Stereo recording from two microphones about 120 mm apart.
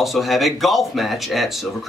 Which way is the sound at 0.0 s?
Centre (ahead or behind).